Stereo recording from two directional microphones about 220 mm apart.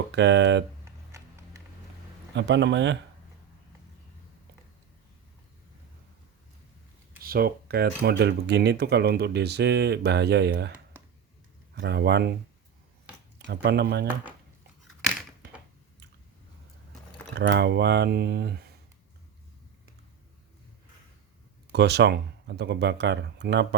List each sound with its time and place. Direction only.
0.1 s speech: 55° right (ahead or behind)
0.9 s a sound: 10° right (ahead or behind)
2.3 s speech: 55° right (ahead or behind)
7.2 s speech: 40° right (ahead or behind)
11.7 s speech: 50° right (ahead or behind)
13.5 s speech: 50° right (ahead or behind)
17.3 s speech: 50° right (ahead or behind)
21.7 s speech: 50° right (ahead or behind)